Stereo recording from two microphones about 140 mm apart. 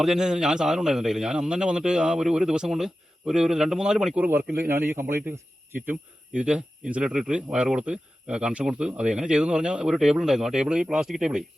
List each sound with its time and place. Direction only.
0.0 s a man's voice: 5° right (ahead or behind)